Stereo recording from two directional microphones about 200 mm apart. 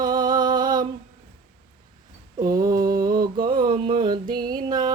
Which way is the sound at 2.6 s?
20° right (ahead or behind).